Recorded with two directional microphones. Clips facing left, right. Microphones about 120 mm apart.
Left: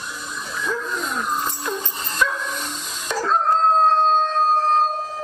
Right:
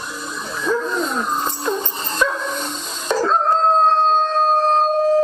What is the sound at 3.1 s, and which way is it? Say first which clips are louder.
Dog: right 3 dB; 30° right (ahead or behind).